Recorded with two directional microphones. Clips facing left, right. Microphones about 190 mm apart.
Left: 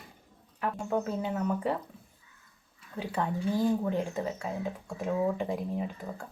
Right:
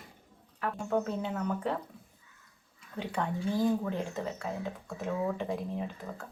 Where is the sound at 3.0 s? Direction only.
5° left (ahead or behind).